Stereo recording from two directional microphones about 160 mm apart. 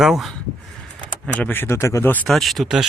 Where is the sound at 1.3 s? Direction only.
10° left (ahead or behind).